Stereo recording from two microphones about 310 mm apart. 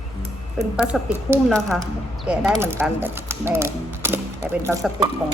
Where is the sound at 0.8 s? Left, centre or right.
Centre.